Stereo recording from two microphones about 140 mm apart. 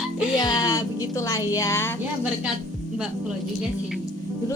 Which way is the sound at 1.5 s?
20° left (ahead or behind).